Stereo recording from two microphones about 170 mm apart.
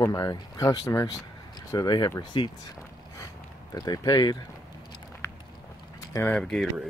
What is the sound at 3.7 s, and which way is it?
Speech, 20° left (ahead or behind).